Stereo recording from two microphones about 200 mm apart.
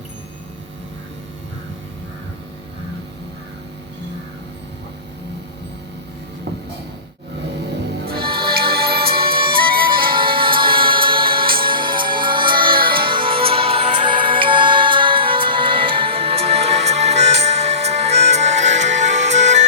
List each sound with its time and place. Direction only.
8.0 s music: 50° right (ahead or behind)
8.3 s music: 25° right (ahead or behind)
8.7 s music: 50° right (ahead or behind)
9.2 s music: 25° right (ahead or behind)